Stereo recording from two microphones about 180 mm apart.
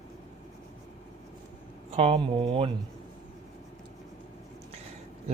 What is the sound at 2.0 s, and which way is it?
Speech, 30° right (ahead or behind).